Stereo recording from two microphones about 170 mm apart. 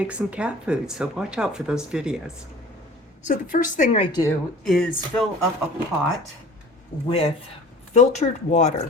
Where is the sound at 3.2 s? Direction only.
50° left (ahead or behind).